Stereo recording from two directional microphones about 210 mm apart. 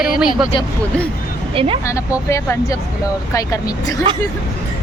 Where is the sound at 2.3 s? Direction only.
15° left (ahead or behind).